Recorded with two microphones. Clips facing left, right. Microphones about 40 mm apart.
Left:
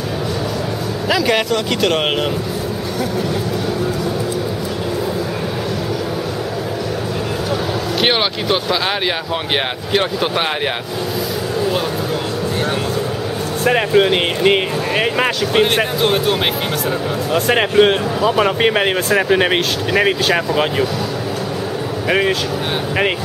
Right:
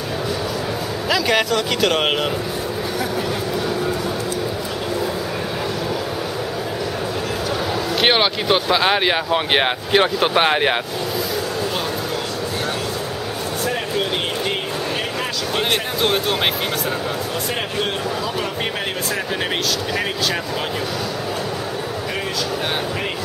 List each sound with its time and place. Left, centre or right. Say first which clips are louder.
1.0 s speech: left 2 dB; centre
8.0 s speech: even; centre
13.7 s speech: left 11 dB; left
16.0 s speech: left 3 dB; centre
17.3 s speech: left 9 dB; left